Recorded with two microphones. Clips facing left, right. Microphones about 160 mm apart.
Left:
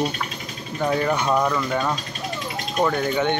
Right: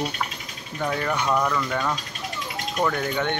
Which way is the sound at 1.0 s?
15° left (ahead or behind).